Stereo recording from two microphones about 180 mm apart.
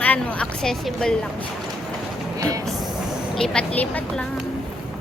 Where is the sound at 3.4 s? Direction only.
5° left (ahead or behind).